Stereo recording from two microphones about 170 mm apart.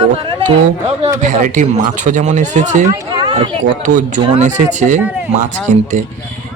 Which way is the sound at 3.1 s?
25° right (ahead or behind).